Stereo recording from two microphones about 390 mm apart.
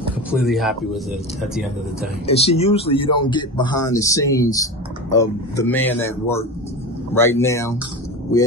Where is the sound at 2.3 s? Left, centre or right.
Centre.